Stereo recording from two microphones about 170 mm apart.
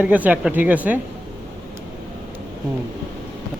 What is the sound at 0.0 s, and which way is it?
Speech, 10° right (ahead or behind).